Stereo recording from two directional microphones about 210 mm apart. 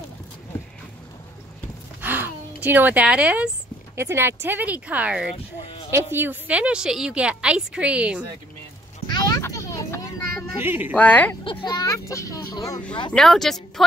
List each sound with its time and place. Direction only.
2.0 s a sound: 10° right (ahead or behind)
3.9 s a woman's voice: 10° right (ahead or behind)
9.0 s a sound: 20° left (ahead or behind)
10.6 s speech: 10° right (ahead or behind)
11.0 s speech: 5° left (ahead or behind)
11.4 s speech: 20° left (ahead or behind)
13.1 s a woman's voice: centre (ahead or behind)